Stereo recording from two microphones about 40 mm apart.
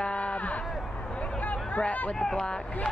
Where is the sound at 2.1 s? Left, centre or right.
Centre.